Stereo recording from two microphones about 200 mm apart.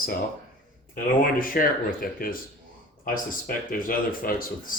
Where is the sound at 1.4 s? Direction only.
45° left (ahead or behind).